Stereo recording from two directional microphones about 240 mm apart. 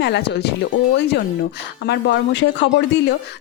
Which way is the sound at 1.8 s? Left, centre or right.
Left.